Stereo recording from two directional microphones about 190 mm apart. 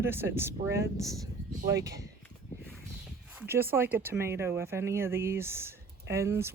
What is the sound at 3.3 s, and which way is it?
Speech, 10° right (ahead or behind).